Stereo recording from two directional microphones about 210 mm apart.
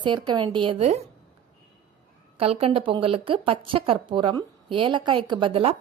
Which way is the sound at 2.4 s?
25° right (ahead or behind).